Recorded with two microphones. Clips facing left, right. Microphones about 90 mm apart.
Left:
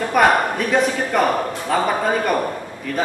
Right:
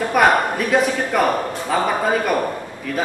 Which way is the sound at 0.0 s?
5° right (ahead or behind).